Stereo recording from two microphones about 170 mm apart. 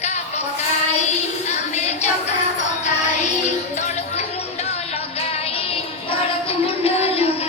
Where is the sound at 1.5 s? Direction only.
40° left (ahead or behind).